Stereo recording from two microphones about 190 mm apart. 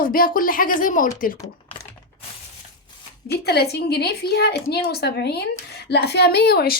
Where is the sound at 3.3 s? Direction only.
55° left (ahead or behind).